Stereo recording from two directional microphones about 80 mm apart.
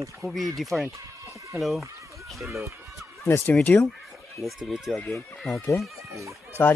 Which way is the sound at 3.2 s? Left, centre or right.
Left.